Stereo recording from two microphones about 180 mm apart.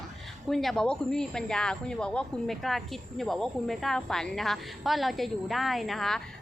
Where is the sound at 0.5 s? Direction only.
Centre (ahead or behind).